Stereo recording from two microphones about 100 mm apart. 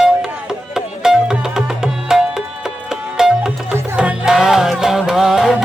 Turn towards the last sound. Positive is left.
turn(degrees=-5)  # may be behind; listen again after turning